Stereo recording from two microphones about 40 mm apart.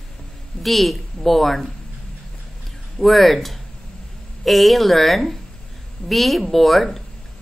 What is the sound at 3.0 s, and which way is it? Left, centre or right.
A woman's voice, centre.